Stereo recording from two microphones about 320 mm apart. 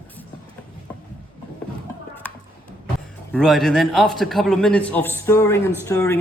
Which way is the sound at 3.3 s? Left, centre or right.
Centre.